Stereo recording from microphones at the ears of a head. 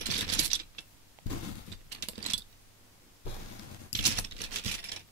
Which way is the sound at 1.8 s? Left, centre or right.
Right.